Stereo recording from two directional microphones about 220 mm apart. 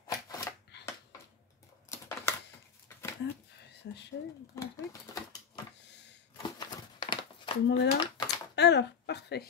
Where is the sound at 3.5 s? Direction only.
50° left (ahead or behind).